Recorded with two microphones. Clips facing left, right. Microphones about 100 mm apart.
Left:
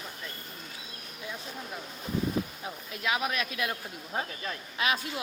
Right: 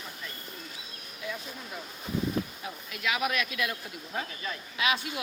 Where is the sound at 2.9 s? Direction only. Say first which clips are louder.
Right 1 dB; 30° left (ahead or behind).